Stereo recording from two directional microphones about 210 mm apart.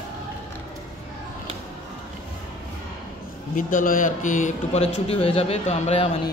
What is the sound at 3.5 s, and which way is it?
A man's voice, 40° left (ahead or behind).